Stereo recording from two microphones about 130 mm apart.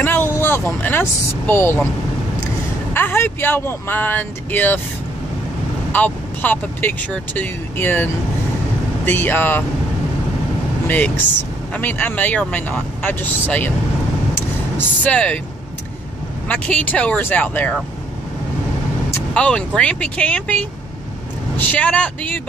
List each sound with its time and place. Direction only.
0.0 s vehicle: 15° left (ahead or behind)
1.5 s speech: 15° left (ahead or behind)
5.9 s speech: 15° left (ahead or behind)
11.7 s speech: 15° left (ahead or behind)
15.0 s speech: 10° left (ahead or behind)
16.4 s speech: 10° left (ahead or behind)
19.3 s speech: 10° left (ahead or behind)